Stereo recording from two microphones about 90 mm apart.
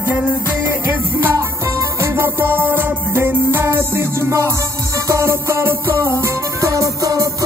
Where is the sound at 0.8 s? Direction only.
20° right (ahead or behind).